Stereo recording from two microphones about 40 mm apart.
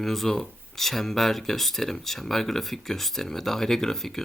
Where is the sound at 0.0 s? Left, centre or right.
Centre.